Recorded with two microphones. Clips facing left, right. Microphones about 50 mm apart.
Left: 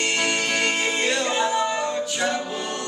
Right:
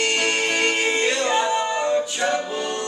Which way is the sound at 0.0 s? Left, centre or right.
Right.